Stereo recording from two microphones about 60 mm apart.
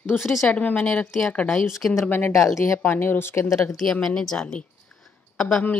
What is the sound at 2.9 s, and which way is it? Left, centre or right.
Speech, left.